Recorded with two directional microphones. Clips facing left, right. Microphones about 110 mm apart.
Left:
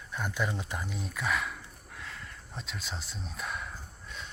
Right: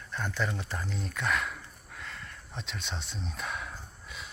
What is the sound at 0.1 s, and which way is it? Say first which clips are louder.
Speech: even; 10° left (ahead or behind).